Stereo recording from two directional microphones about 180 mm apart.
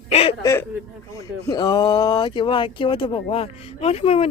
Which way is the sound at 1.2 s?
20° left (ahead or behind).